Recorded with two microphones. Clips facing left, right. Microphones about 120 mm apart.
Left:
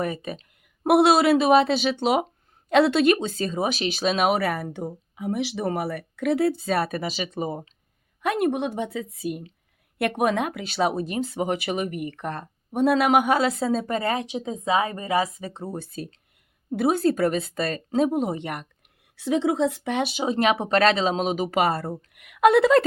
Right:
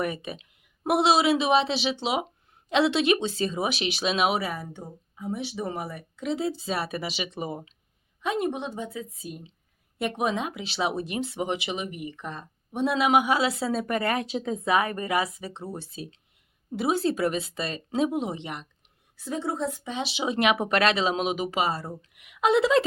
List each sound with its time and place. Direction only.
0.0 s speech: 40° left (ahead or behind)
0.9 s speech: 55° left (ahead or behind); by 7.7 s 40° left (ahead or behind)
8.2 s a woman's voice: 60° left (ahead or behind)
10.0 s speech: 60° left (ahead or behind); by 15.6 s 40° left (ahead or behind)
15.7 s speech: 50° left (ahead or behind)
19.1 s speech: 90° left; by 21.6 s 40° left (ahead or behind)
21.6 s a woman's voice: 60° left (ahead or behind)